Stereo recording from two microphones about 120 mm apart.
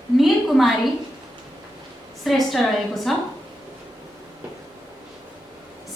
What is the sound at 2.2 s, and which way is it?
Speech, centre (ahead or behind).